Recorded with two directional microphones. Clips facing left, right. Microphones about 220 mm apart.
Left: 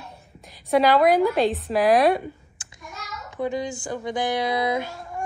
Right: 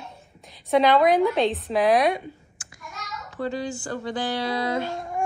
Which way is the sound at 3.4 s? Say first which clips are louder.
Left 2 dB; 15° left (ahead or behind).